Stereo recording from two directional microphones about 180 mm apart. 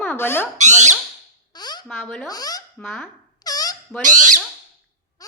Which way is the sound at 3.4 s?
20° left (ahead or behind).